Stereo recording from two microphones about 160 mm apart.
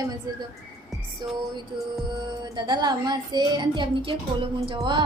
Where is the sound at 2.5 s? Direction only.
25° right (ahead or behind).